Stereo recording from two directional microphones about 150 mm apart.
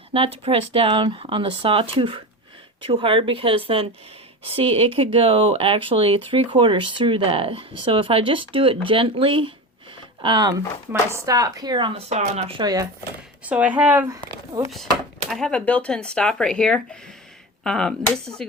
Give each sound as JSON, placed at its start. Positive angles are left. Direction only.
{"t": 0.1, "sound": "speech", "side_deg": -40}
{"t": 13.4, "sound": "speech", "side_deg": -10}
{"t": 14.1, "sound": "speech", "side_deg": -20}
{"t": 15.3, "sound": "speech", "side_deg": 5}